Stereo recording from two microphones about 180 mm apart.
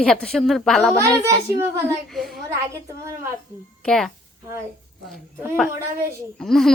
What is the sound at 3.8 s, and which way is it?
Speech, 5° left (ahead or behind).